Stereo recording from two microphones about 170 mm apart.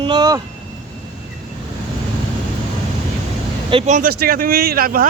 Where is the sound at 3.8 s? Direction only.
50° right (ahead or behind).